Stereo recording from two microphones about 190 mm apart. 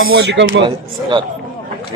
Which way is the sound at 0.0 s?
60° right (ahead or behind).